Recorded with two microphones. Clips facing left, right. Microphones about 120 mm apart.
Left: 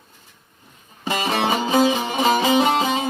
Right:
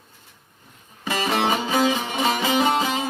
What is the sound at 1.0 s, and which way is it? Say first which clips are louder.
Music: left 1 dB; 25° left (ahead or behind).